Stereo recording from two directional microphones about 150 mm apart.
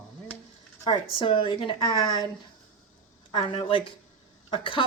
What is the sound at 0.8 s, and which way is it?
Speech, 35° left (ahead or behind).